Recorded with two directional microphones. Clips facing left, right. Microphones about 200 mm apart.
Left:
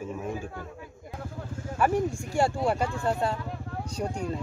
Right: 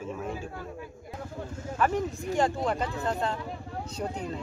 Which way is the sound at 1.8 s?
10° left (ahead or behind).